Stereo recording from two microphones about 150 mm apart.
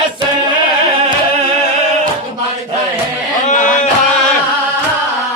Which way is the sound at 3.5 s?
60° left (ahead or behind).